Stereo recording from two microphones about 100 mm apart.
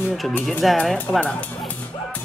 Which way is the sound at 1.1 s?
35° left (ahead or behind).